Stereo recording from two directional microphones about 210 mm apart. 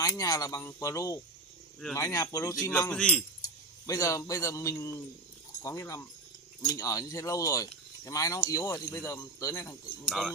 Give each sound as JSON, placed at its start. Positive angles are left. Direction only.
{"t": 0.0, "sound": "speech", "side_deg": 15}
{"t": 3.4, "sound": "a man's voice", "side_deg": 15}
{"t": 10.0, "sound": "speech", "side_deg": 0}